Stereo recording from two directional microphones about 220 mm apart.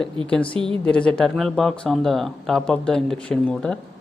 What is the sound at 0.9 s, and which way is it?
Speech, 5° left (ahead or behind).